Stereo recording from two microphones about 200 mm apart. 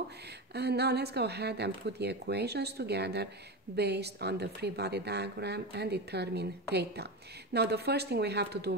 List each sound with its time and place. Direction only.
0.6 s a woman's voice: 55° right (ahead or behind)